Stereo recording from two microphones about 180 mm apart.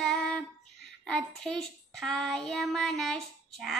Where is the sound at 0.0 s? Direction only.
Centre (ahead or behind).